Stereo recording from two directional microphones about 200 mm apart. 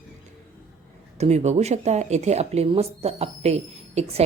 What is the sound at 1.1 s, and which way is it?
Speech, 35° right (ahead or behind).